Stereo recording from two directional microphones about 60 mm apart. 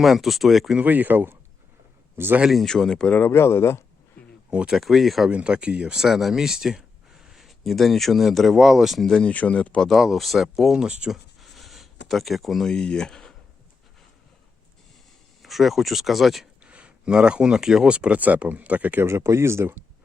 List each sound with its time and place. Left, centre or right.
0.0 s speech: centre
0.9 s speech: right
2.5 s speech: centre
3.1 s speech: left
3.3 s speech: left
4.7 s speech: centre
5.3 s speech: centre
9.0 s speech: centre
9.9 s speech: centre
11.1 s a sound: centre
12.7 s speech: centre
15.4 s speech: centre
16.6 s speech: centre
19.0 s speech: right